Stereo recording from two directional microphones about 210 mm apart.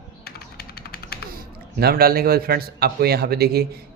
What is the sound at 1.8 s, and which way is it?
A man's voice, 50° right (ahead or behind).